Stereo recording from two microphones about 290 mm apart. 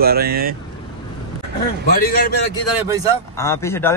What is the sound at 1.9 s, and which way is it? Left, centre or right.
Speech, left.